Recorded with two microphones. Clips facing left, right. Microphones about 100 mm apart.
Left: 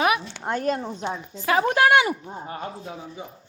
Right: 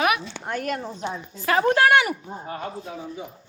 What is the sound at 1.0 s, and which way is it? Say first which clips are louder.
A woman's voice: even; 15° left (ahead or behind).